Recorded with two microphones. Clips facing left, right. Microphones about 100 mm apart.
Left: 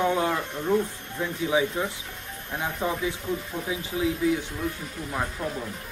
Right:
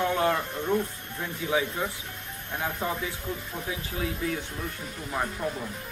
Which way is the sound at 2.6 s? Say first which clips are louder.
Left 2 dB; 15° left (ahead or behind).